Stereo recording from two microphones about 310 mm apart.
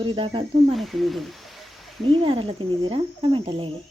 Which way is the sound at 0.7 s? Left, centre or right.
Centre.